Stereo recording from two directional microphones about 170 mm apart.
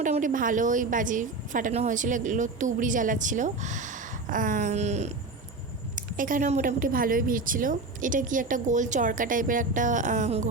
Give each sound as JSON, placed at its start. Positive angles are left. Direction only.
{"t": 0.0, "sound": "a woman's voice", "side_deg": -50}
{"t": 6.0, "sound": "a woman's voice", "side_deg": -50}